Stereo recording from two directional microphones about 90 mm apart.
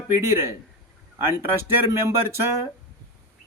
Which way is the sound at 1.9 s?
30° right (ahead or behind).